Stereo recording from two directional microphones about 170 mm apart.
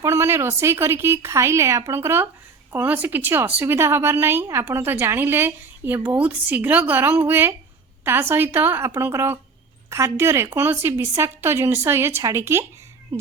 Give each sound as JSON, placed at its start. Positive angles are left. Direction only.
{"t": 0.0, "sound": "a woman's voice", "side_deg": -15}